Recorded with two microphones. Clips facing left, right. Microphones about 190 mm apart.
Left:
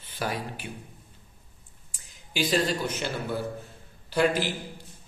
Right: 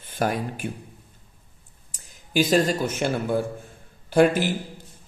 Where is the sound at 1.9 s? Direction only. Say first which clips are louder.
Right 10 dB; 45° right (ahead or behind).